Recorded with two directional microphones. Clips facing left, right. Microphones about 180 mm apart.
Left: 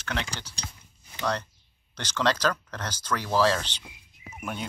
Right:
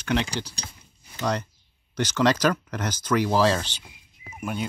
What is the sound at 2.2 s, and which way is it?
Speech, 10° right (ahead or behind).